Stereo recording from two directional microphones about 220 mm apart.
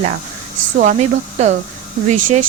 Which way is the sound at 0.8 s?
35° right (ahead or behind).